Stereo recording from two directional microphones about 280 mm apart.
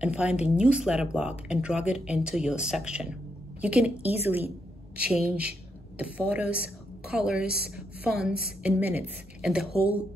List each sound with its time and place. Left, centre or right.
0.0 s a woman's voice: centre